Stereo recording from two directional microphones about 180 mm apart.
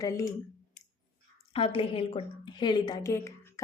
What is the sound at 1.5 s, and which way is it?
A woman's voice, 30° left (ahead or behind).